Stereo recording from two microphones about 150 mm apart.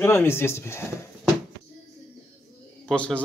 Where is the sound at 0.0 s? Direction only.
15° left (ahead or behind).